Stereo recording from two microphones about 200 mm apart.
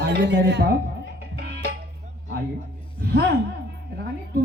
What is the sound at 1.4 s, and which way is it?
Music, 55° right (ahead or behind).